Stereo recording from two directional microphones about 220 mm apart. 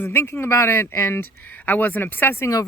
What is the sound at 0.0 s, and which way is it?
Speech, 10° left (ahead or behind).